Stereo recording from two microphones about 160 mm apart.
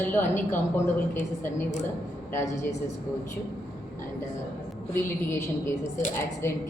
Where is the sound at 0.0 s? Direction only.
15° left (ahead or behind).